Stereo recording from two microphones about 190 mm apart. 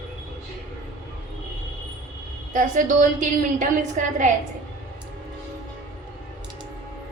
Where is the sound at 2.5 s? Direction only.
45° right (ahead or behind).